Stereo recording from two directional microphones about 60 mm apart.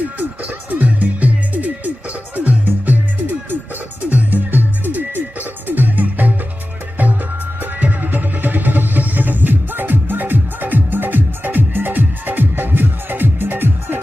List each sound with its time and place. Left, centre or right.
0.2 s music: right
7.6 s music: right